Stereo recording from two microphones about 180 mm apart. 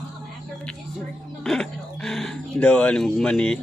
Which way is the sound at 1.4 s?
5° left (ahead or behind).